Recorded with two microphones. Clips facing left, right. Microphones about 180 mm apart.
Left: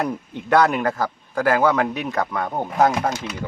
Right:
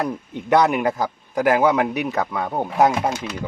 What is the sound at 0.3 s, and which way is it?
Speech, 15° right (ahead or behind).